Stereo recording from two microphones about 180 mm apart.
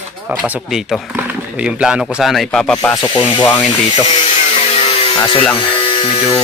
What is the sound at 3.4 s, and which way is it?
Speech, 10° left (ahead or behind).